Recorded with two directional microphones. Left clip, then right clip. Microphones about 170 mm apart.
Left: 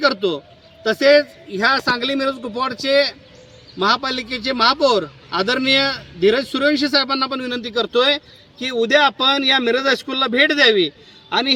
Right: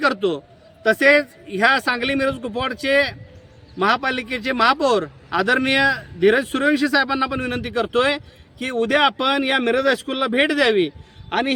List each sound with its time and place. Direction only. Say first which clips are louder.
0.0 s a man's voice: left 2 dB; 15° right (ahead or behind)